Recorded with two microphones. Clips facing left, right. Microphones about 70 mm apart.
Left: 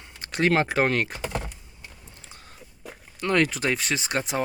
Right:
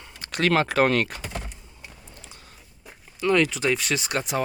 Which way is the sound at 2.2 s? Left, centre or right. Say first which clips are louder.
Even; left.